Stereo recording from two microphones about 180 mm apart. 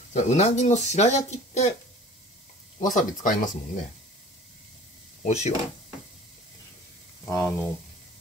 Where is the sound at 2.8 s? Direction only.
45° left (ahead or behind).